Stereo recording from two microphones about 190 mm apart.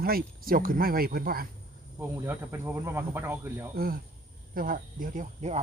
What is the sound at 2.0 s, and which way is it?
Speech, 10° right (ahead or behind).